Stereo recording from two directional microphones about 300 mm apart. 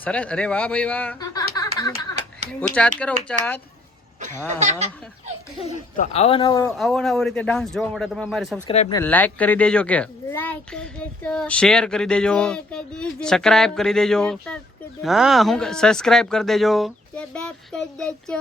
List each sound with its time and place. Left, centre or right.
0.0 s speech: centre
3.2 s speech: centre
4.2 s speech: right
5.6 s speech: left
6.7 s speech: centre
8.6 s speech: centre
9.0 s speech: centre